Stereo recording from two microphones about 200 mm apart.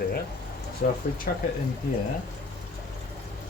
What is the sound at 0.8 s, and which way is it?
Speech, 50° left (ahead or behind).